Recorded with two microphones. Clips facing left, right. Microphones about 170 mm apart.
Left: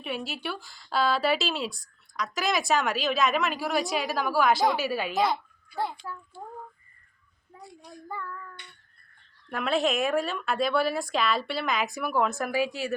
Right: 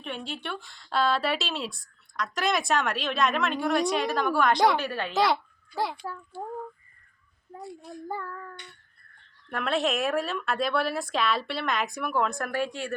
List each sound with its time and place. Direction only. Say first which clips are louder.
0.0 s a woman's voice: left 2 dB; 5° left (ahead or behind)
5.1 s a child's voice: right 2 dB; 90° right
7.6 s speech: right 6 dB; centre (ahead or behind)
8.0 s child singing: right 3 dB; 35° right (ahead or behind)
9.5 s speech: left 1 dB; centre (ahead or behind)